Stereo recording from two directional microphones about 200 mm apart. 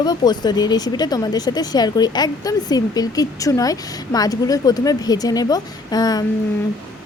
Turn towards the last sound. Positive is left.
turn(degrees=20)  # may be behind; listen again after turning